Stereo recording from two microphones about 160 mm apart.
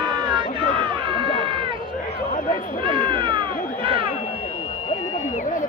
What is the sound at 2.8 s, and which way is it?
Cat, 35° right (ahead or behind).